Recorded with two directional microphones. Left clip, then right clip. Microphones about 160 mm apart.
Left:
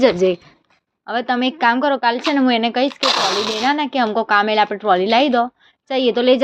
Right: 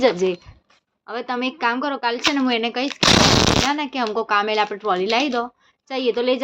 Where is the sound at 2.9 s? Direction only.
90° right.